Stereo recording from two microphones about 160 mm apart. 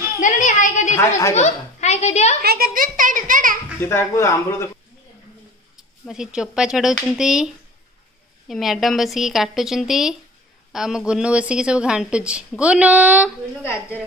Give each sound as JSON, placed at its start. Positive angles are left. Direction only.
{"t": 0.2, "sound": "a sound", "side_deg": 50}
{"t": 1.3, "sound": "a child's voice", "side_deg": 45}
{"t": 2.4, "sound": "a child's voice", "side_deg": -70}
{"t": 3.8, "sound": "speech", "side_deg": 15}
{"t": 6.0, "sound": "a woman's voice", "side_deg": -5}